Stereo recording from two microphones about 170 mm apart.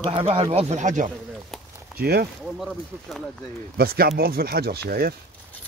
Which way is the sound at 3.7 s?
65° right (ahead or behind).